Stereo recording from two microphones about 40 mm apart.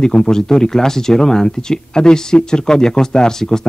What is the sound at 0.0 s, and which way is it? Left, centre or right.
A man's voice, centre.